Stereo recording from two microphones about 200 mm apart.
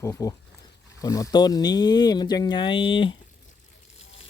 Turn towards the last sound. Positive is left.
turn(degrees=25)  # may be behind; listen again after turning